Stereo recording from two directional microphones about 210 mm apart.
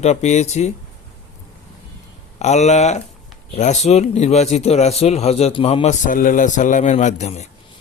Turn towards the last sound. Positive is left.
turn(degrees=30)  # may be behind; listen again after turning